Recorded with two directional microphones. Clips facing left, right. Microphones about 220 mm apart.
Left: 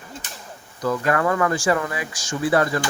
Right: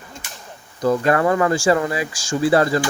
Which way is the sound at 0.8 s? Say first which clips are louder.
Right 4 dB; 30° right (ahead or behind).